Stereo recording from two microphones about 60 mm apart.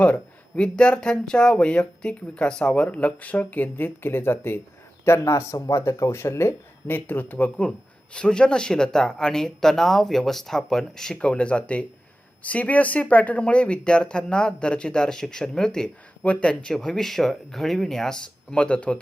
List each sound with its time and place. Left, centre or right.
0.0 s speech: left
5.0 s speech: left; by 15.9 s centre
16.2 s speech: centre
16.7 s speech: centre